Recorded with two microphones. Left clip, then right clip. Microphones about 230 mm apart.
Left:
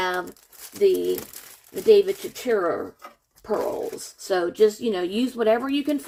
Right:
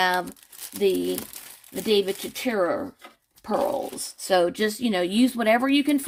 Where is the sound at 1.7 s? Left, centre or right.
Right.